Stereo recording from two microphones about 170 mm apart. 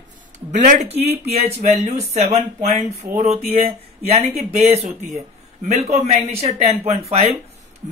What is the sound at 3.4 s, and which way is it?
A man's voice, 35° right (ahead or behind).